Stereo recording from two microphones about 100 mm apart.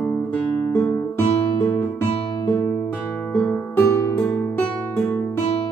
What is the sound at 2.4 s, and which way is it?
Music, 40° left (ahead or behind).